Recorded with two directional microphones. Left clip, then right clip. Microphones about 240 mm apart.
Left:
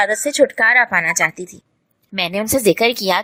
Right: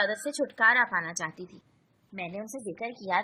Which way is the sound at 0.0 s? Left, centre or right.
Left.